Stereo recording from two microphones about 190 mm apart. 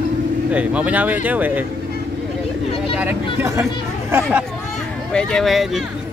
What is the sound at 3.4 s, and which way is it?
Speech, 15° right (ahead or behind).